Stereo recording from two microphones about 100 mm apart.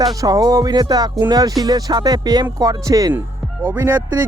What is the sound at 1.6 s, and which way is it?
Speech, 40° right (ahead or behind).